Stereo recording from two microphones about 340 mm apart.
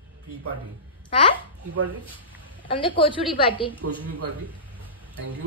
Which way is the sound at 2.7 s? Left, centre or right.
Centre.